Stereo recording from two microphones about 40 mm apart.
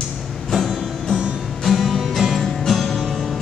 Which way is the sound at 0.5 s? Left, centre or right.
Centre.